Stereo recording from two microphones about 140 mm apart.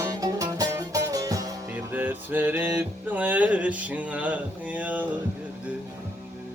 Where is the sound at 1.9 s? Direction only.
10° right (ahead or behind).